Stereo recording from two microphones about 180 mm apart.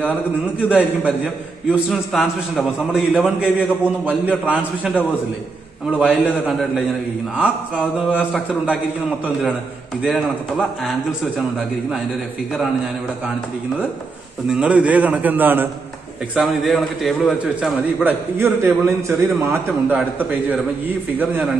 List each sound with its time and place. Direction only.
0.6 s a man's voice: 5° right (ahead or behind)
10.0 s a man's voice: centre (ahead or behind)
14.5 s a man's voice: 5° right (ahead or behind)
16.3 s a man's voice: centre (ahead or behind)